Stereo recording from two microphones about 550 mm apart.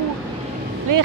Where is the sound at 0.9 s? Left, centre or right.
Right.